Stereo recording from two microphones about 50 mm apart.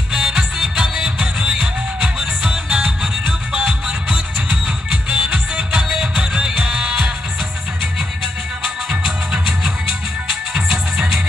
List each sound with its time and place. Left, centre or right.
0.1 s music: centre; by 3.7 s right
5.1 s music: centre
10.5 s music: centre